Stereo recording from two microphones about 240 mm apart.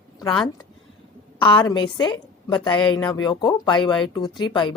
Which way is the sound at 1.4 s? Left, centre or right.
Centre.